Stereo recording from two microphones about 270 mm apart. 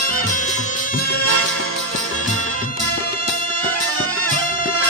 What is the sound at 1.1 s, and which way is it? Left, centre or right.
Music, left.